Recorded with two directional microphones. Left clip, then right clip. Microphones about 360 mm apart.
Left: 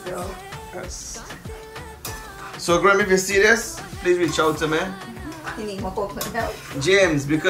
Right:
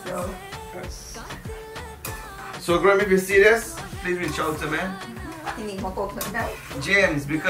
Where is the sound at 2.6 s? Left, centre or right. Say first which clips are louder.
Left 2 dB; centre.